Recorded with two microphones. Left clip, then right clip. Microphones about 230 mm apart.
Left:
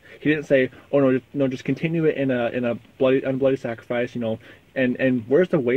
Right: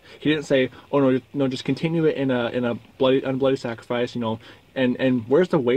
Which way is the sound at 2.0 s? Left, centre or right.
Right.